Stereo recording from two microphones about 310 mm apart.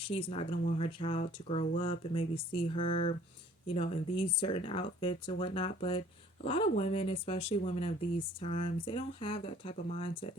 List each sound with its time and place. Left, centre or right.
0.0 s speech: centre